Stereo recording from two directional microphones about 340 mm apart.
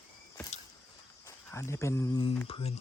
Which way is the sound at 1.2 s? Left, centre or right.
Centre.